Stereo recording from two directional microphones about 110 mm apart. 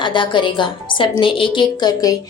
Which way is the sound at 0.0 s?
45° left (ahead or behind).